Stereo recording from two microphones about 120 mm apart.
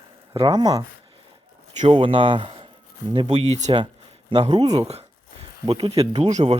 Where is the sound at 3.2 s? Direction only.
65° right (ahead or behind).